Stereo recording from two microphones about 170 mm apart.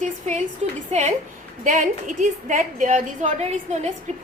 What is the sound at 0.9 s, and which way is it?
A woman's voice, 40° right (ahead or behind).